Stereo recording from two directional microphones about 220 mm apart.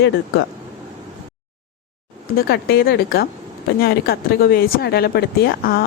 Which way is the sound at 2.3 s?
45° left (ahead or behind).